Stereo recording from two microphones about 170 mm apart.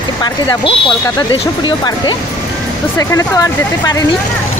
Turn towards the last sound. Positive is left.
turn(degrees=20)  # may be behind; listen again after turning